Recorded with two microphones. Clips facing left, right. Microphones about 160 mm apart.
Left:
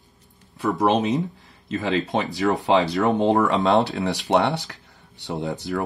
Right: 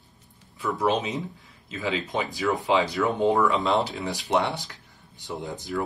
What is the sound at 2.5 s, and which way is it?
Speech, 75° left (ahead or behind).